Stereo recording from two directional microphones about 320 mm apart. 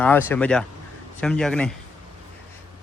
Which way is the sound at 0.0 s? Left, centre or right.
Centre.